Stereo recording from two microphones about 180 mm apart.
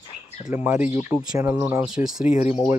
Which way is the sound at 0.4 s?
15° right (ahead or behind).